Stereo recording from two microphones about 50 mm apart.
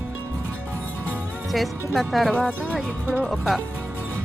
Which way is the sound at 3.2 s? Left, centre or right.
Centre.